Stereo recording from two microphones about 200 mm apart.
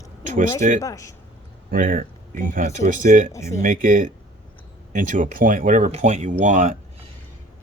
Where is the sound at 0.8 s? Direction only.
15° left (ahead or behind).